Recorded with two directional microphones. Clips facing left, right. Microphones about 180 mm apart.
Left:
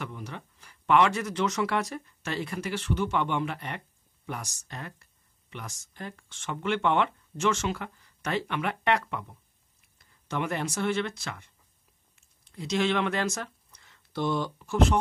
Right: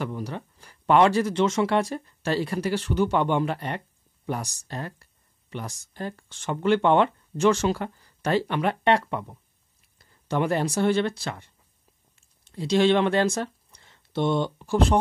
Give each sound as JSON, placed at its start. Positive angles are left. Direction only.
{"t": 0.0, "sound": "speech", "side_deg": -35}